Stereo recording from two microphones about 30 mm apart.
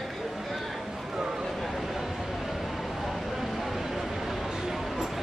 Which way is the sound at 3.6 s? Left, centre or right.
Centre.